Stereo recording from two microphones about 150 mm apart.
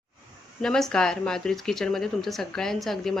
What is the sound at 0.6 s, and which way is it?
A woman's voice, 5° left (ahead or behind).